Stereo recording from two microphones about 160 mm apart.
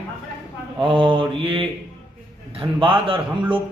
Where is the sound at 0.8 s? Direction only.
35° right (ahead or behind).